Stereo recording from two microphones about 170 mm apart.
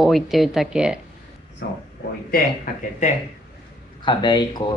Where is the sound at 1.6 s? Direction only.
90° left.